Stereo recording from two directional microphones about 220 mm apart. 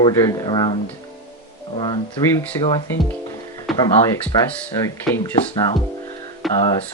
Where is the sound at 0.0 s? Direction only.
20° left (ahead or behind).